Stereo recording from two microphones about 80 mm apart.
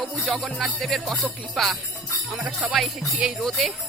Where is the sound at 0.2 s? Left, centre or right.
Centre.